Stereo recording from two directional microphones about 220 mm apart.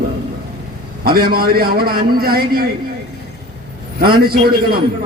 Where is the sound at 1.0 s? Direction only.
45° right (ahead or behind).